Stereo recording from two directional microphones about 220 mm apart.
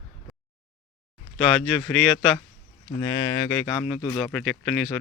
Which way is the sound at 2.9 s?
15° left (ahead or behind).